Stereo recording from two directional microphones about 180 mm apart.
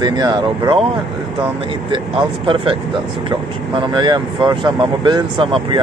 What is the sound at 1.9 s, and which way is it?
Speech, 25° right (ahead or behind).